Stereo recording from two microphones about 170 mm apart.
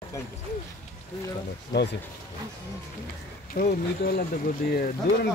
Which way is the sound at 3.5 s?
60° left (ahead or behind).